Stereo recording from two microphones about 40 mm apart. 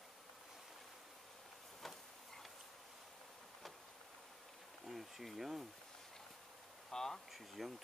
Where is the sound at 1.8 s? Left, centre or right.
Centre.